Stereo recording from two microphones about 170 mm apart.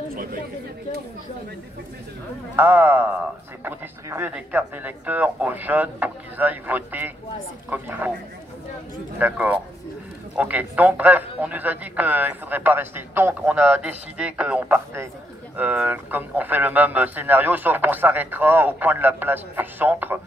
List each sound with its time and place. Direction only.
0.1 s speech: 60° right (ahead or behind)
2.5 s a man's voice: 10° right (ahead or behind)
9.2 s a man's voice: 10° right (ahead or behind)